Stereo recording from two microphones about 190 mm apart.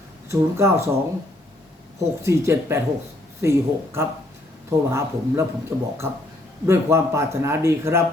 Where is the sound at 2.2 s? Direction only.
15° right (ahead or behind).